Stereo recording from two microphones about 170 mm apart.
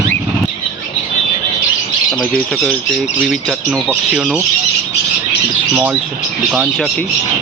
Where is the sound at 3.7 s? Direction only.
5° right (ahead or behind).